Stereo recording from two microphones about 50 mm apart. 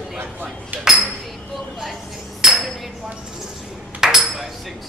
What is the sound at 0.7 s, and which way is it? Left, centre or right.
Speech, right.